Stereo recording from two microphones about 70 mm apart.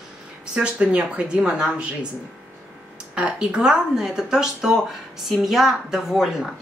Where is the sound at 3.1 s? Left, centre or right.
Centre.